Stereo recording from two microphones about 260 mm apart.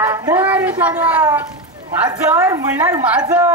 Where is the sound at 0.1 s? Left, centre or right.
Centre.